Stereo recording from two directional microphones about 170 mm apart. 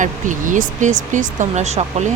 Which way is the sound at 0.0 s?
50° right (ahead or behind).